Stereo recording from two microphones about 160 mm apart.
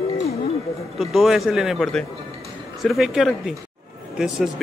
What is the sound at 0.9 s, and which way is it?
A man's voice, centre (ahead or behind).